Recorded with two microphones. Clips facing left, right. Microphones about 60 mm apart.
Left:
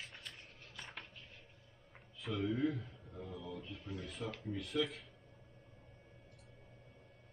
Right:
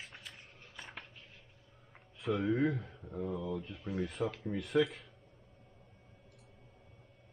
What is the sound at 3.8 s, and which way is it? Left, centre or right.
Speech, centre.